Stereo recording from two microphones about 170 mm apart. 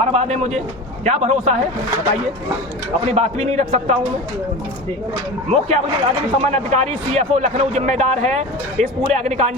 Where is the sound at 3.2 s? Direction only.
40° right (ahead or behind).